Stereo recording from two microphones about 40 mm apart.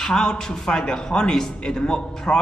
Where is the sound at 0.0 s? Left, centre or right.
Centre.